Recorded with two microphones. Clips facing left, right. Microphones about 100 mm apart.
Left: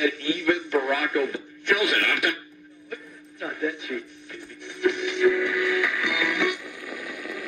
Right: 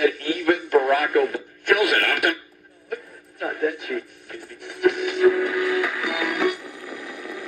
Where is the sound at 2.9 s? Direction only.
50° right (ahead or behind).